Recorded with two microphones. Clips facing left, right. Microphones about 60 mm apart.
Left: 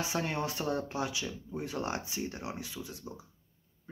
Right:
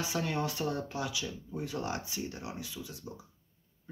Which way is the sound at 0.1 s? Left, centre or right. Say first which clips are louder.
Even; left.